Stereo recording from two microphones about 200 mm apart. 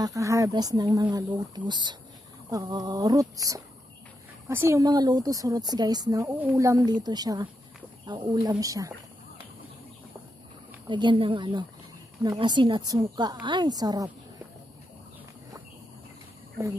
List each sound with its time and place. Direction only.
0.0 s a woman's voice: 15° right (ahead or behind)
10.9 s a woman's voice: 25° right (ahead or behind)